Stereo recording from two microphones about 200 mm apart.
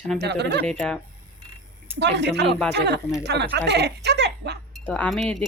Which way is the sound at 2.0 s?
60° right (ahead or behind).